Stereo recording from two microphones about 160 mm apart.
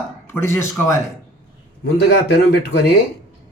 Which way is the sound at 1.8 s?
90° left.